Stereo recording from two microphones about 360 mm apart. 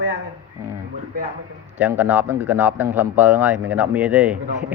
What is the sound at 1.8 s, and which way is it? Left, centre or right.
A man's voice, centre.